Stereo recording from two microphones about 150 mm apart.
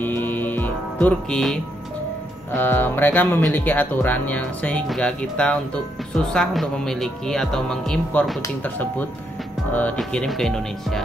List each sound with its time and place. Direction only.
0.0 s music: 10° left (ahead or behind)
2.5 s speech: 15° left (ahead or behind)